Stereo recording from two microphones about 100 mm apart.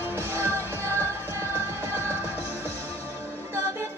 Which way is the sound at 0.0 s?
25° right (ahead or behind).